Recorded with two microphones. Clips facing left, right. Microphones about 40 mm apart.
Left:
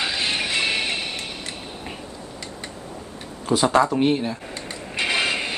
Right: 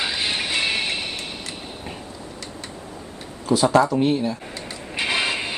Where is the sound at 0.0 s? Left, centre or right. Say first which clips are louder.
Even; centre.